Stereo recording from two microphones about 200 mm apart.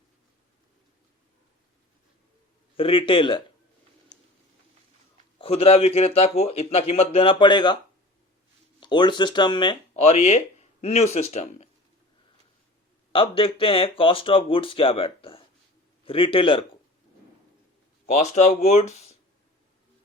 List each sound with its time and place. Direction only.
2.7 s speech: 25° left (ahead or behind)
5.4 s speech: 30° left (ahead or behind)
8.8 s speech: 20° left (ahead or behind)
13.1 s speech: 25° left (ahead or behind)
18.0 s speech: 35° left (ahead or behind)